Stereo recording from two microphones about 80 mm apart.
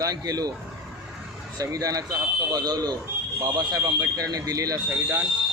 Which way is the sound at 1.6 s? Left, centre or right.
Right.